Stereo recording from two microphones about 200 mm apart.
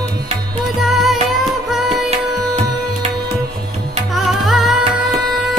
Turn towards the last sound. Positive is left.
turn(degrees=0)  # may be behind; listen again after turning